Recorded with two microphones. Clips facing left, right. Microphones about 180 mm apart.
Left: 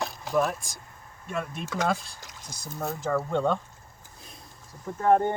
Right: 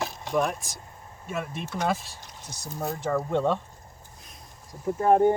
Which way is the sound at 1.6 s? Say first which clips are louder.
Left 1 dB; 90° left.